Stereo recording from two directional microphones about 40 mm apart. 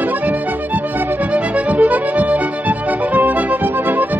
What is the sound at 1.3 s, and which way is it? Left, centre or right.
Music, right.